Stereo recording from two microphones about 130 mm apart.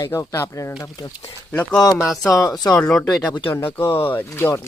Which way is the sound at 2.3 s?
30° left (ahead or behind).